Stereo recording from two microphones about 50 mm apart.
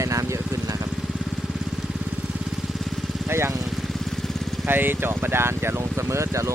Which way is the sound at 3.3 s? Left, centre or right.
Right.